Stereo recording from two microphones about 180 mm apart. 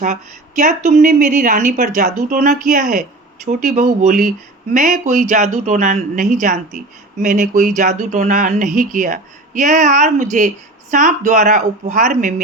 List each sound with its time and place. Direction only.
0.6 s speech: 40° right (ahead or behind)